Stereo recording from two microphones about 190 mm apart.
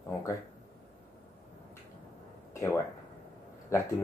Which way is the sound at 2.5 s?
15° left (ahead or behind).